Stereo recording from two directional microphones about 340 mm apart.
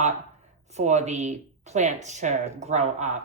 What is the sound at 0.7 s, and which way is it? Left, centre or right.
Speech, centre.